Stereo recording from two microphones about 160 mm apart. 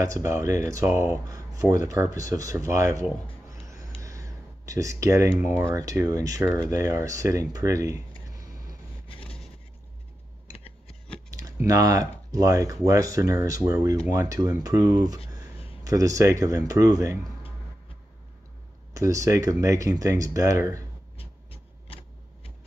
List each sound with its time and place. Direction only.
0.0 s speech: 20° right (ahead or behind)
9.2 s vehicle: 5° left (ahead or behind)
11.2 s typing: 20° right (ahead or behind)
11.6 s speech: 20° right (ahead or behind)
18.9 s speech: 20° right (ahead or behind)
21.2 s a sound: 35° left (ahead or behind)